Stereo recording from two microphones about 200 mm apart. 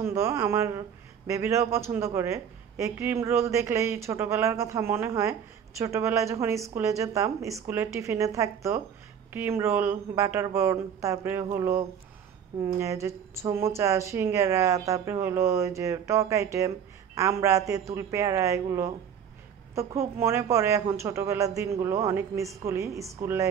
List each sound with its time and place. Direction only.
0.0 s speech: 15° right (ahead or behind)